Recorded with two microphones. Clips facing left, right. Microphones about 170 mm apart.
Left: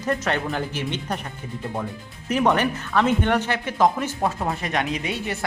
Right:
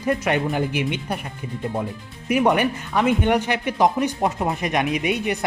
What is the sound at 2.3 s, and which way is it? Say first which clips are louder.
Speech: right 2 dB; 10° right (ahead or behind).